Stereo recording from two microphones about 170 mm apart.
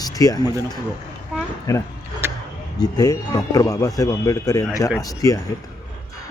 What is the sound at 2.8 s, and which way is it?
A man's voice, 20° left (ahead or behind).